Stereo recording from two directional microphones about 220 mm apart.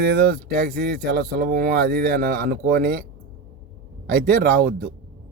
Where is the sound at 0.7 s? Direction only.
50° right (ahead or behind).